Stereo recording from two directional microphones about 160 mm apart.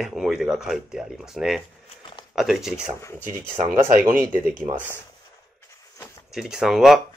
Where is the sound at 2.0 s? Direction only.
30° left (ahead or behind).